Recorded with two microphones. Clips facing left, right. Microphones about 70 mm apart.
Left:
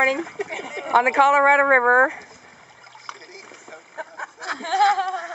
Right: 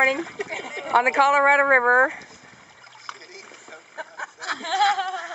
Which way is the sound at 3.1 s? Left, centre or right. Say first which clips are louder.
Left 1 dB; left.